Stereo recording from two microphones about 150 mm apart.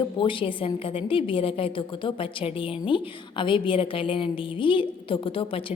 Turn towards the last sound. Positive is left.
turn(degrees=35)  # may be behind; listen again after turning